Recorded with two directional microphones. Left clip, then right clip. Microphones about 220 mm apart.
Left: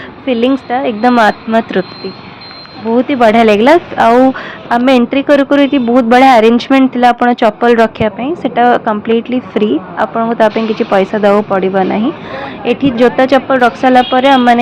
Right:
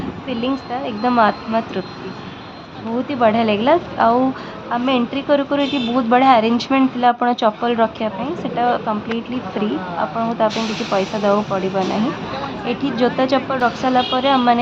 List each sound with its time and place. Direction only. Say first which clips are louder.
0.3 s a woman's voice: left 11 dB; 25° left (ahead or behind)
3.1 s a woman's voice: left 8 dB; 25° left (ahead or behind)